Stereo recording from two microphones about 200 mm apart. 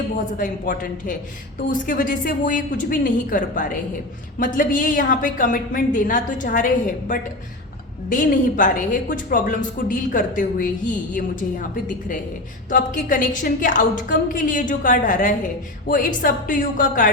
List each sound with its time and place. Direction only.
0.3 s a woman's voice: 45° left (ahead or behind)